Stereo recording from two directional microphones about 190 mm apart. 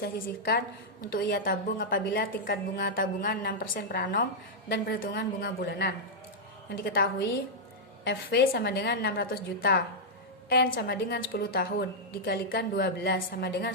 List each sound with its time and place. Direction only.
0.0 s a woman's voice: 55° left (ahead or behind)
2.0 s a woman's voice: 65° left (ahead or behind)